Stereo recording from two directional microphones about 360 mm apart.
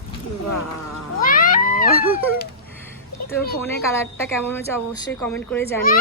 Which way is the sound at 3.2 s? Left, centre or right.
Left.